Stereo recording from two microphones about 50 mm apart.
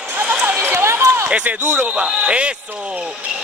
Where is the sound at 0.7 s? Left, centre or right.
Right.